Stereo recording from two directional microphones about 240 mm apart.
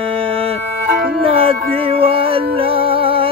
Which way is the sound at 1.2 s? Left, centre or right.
Right.